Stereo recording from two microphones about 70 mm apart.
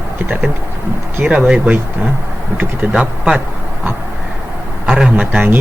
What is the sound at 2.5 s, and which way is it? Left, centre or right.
Speech, right.